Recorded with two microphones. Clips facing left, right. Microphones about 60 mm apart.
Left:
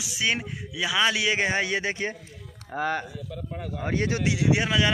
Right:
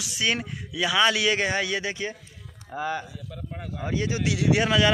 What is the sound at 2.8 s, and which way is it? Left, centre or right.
Speech, left.